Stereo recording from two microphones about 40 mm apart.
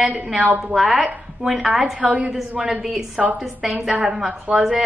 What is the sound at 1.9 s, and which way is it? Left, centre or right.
Speech, right.